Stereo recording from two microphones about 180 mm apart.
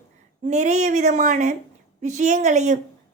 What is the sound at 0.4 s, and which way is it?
A woman's voice, 40° right (ahead or behind).